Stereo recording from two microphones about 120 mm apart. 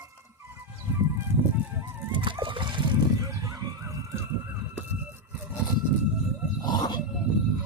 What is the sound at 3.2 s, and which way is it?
Chicken, 25° right (ahead or behind).